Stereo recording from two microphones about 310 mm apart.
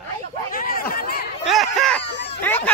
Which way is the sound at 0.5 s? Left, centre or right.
Left.